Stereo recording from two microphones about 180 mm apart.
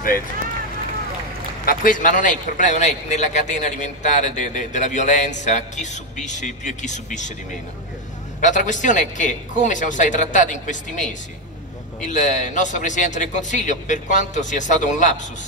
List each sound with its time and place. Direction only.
1.7 s a man's voice: 50° left (ahead or behind)
8.4 s a man's voice: 45° left (ahead or behind)